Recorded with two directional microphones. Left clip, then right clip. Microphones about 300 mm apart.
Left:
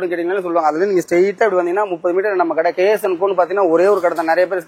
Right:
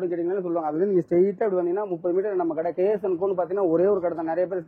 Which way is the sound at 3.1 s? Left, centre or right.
Centre.